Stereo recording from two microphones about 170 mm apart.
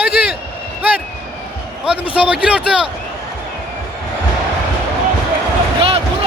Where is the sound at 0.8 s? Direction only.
10° right (ahead or behind).